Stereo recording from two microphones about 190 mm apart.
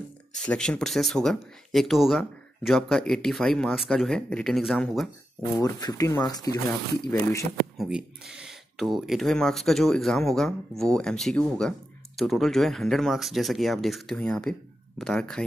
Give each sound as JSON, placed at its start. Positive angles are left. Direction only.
{"t": 0.4, "sound": "speech", "side_deg": 5}
{"t": 5.6, "sound": "speech", "side_deg": 20}
{"t": 7.7, "sound": "speech", "side_deg": 0}